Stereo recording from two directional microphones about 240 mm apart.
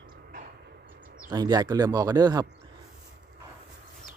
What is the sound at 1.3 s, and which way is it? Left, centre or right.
Speech, centre.